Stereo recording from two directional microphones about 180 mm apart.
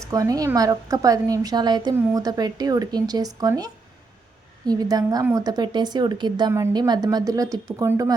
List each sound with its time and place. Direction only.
0.0 s a woman's voice: 20° right (ahead or behind)